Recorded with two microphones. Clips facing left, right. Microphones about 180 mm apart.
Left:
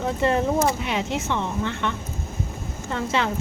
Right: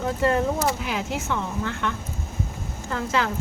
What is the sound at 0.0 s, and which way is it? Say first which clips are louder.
Speech: even; centre (ahead or behind).